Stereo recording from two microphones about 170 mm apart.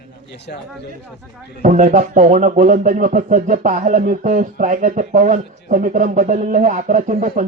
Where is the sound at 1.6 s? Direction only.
45° right (ahead or behind).